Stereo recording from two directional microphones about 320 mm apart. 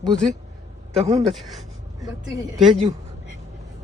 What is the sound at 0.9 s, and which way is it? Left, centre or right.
Speech, centre.